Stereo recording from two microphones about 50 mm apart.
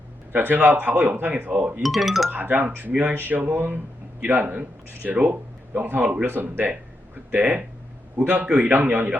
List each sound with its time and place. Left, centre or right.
0.3 s speech: right
1.8 s speech: centre
2.3 s speech: right
6.0 s a man's voice: right
6.2 s speech: right